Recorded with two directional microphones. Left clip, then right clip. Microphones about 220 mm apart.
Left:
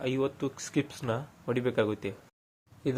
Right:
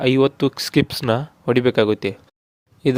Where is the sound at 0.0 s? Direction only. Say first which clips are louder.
Right 14 dB; 45° right (ahead or behind).